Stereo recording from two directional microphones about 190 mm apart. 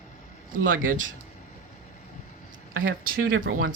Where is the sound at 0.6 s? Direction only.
45° right (ahead or behind).